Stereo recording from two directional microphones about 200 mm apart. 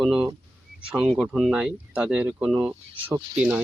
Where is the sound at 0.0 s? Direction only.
5° right (ahead or behind).